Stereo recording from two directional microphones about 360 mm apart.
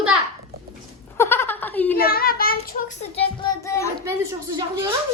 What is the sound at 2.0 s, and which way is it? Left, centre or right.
Child singing, left.